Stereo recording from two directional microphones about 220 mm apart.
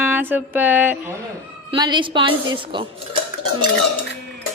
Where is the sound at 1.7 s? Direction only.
20° right (ahead or behind).